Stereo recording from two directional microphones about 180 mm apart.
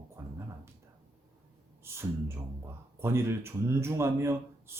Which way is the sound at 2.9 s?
15° right (ahead or behind).